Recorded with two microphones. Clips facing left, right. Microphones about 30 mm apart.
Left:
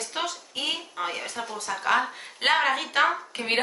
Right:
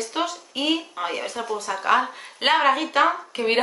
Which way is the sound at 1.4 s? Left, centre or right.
Right.